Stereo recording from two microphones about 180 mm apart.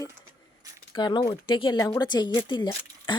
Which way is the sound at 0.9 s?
25° left (ahead or behind).